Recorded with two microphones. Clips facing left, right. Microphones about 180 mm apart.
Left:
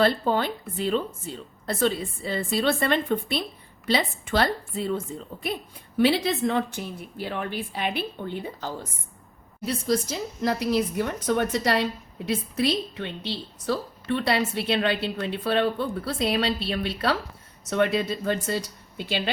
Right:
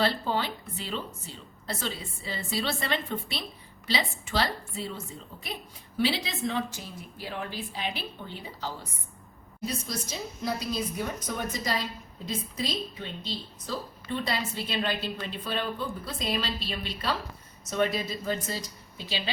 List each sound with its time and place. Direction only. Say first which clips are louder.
0.0 s a woman's voice: left 6 dB; 50° left (ahead or behind)
9.6 s a woman's voice: left 9 dB; 80° left; by 19.3 s 60° left (ahead or behind)